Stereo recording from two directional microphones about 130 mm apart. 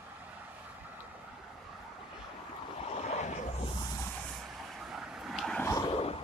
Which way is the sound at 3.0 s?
60° left (ahead or behind).